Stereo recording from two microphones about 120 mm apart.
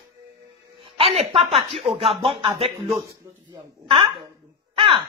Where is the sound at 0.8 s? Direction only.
45° right (ahead or behind).